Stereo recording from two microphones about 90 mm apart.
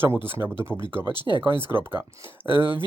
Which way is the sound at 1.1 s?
55° left (ahead or behind).